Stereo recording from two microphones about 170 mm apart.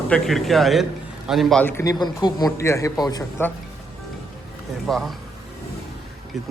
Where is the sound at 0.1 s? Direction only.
Centre (ahead or behind); by 3.5 s 20° left (ahead or behind).